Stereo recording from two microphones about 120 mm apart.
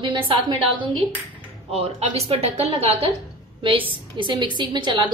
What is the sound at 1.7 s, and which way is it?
A woman's voice, 60° right (ahead or behind).